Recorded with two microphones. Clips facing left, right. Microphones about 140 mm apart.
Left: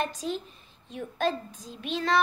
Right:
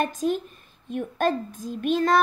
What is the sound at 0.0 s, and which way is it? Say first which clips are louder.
A woman's voice: right 6 dB; 50° right (ahead or behind).